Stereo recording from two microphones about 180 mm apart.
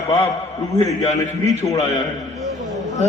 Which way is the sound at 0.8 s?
20° left (ahead or behind).